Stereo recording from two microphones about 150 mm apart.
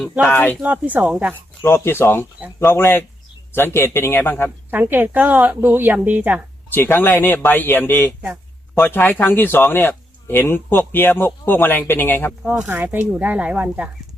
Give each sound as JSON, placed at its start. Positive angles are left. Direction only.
{"t": 0.3, "sound": "speech", "side_deg": 10}
{"t": 0.6, "sound": "speech", "side_deg": -10}
{"t": 1.6, "sound": "speech", "side_deg": 15}
{"t": 4.7, "sound": "speech", "side_deg": -10}
{"t": 6.7, "sound": "a man's voice", "side_deg": 15}
{"t": 12.4, "sound": "speech", "side_deg": -10}